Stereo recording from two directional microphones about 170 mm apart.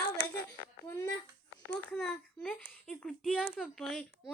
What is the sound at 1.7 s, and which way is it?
A child's voice, 5° left (ahead or behind).